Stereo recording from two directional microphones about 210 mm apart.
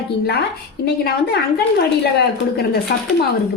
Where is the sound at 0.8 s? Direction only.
50° left (ahead or behind).